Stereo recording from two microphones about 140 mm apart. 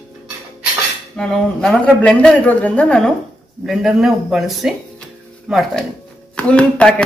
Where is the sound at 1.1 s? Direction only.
5° left (ahead or behind).